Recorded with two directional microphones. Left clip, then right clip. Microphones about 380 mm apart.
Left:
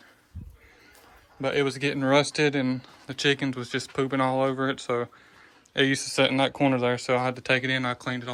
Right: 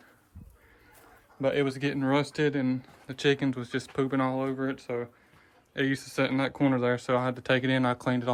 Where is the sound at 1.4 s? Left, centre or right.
Centre.